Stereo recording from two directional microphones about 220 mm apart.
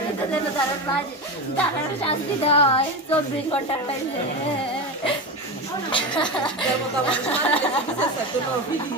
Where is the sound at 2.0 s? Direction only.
25° left (ahead or behind).